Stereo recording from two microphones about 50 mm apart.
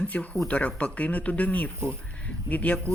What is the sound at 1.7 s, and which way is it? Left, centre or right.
Speech, right.